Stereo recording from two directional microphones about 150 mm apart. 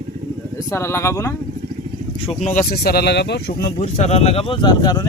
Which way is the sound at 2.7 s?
90° left.